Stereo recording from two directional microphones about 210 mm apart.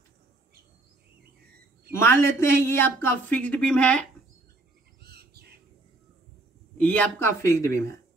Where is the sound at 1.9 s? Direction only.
10° left (ahead or behind).